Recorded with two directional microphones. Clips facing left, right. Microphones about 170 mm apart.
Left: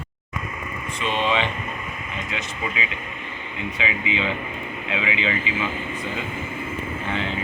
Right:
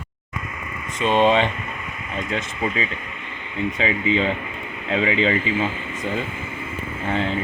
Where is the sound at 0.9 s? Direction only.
45° right (ahead or behind).